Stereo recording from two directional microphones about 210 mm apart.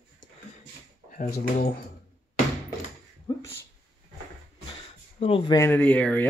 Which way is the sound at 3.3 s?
20° left (ahead or behind).